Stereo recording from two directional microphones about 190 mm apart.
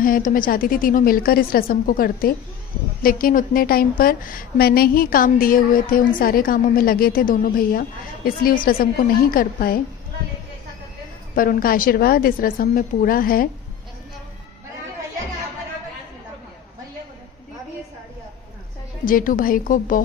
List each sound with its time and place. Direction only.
0.0 s a woman's voice: 50° left (ahead or behind)
11.3 s a woman's voice: 50° left (ahead or behind)
19.0 s a woman's voice: 45° left (ahead or behind)